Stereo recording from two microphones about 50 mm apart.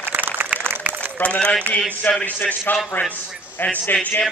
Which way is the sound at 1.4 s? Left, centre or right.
Centre.